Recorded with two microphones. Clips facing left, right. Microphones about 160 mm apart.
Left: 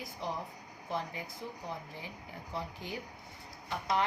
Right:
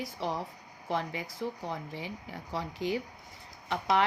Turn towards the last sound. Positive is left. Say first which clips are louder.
# right 5 dB
turn(degrees=-90)